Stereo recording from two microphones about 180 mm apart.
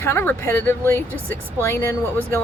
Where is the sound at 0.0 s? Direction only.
15° left (ahead or behind).